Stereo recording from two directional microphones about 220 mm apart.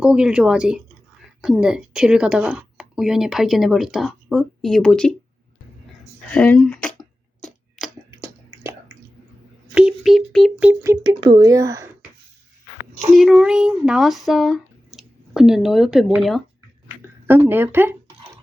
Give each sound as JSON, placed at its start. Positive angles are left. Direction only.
{"t": 0.0, "sound": "speech", "side_deg": -5}
{"t": 6.3, "sound": "speech", "side_deg": 5}
{"t": 7.4, "sound": "a sound", "side_deg": 0}
{"t": 8.2, "sound": "a sound", "side_deg": -10}
{"t": 9.7, "sound": "speech", "side_deg": 0}
{"t": 11.2, "sound": "speech", "side_deg": -20}
{"t": 13.1, "sound": "speech", "side_deg": 0}